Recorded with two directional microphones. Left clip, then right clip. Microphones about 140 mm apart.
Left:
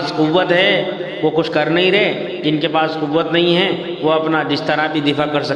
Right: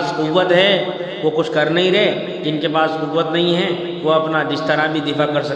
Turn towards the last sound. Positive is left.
turn(degrees=35)  # may be behind; listen again after turning